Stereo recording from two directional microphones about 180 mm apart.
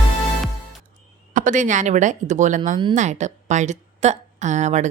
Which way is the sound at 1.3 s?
45° right (ahead or behind).